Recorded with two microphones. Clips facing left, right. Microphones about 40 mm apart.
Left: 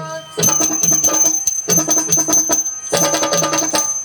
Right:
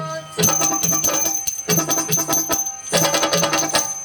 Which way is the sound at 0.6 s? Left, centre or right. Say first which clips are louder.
Left 2 dB; centre.